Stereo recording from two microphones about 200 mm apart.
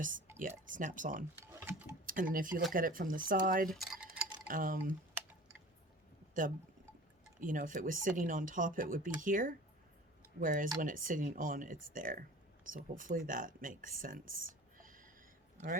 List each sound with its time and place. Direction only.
0.3 s speech: 40° right (ahead or behind)
1.5 s tick-tock: 10° right (ahead or behind)
2.0 s speech: 45° right (ahead or behind)
3.7 s a sound: centre (ahead or behind)
4.4 s speech: 45° right (ahead or behind)
7.3 s speech: 40° right (ahead or behind)